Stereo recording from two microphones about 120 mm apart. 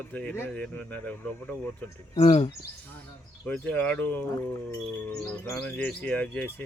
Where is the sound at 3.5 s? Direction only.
10° left (ahead or behind).